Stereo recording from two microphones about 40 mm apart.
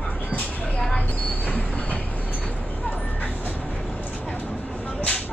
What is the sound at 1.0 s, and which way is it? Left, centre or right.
Train, left.